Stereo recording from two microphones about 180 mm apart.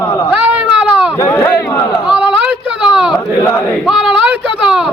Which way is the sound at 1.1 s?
15° left (ahead or behind).